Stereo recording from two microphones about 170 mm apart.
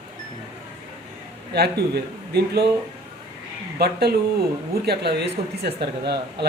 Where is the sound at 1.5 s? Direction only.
70° right (ahead or behind).